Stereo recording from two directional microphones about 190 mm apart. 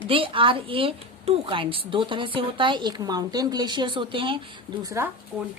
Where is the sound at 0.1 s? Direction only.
25° right (ahead or behind).